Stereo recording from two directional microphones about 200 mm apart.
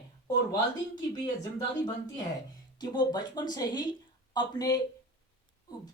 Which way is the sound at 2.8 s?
20° left (ahead or behind).